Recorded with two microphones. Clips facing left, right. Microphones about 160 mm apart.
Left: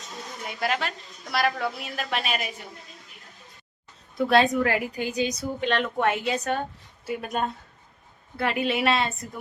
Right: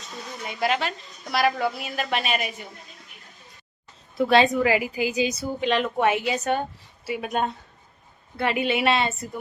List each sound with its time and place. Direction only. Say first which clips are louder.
0.4 s a woman's voice: right 3 dB; centre (ahead or behind)
4.2 s a woman's voice: right 2 dB; centre (ahead or behind)